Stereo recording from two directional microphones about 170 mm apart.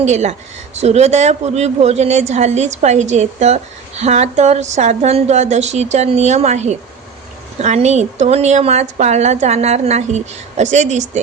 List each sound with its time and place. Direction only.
0.0 s a woman's voice: 40° right (ahead or behind)